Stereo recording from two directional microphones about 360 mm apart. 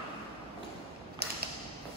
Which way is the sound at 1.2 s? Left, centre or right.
Right.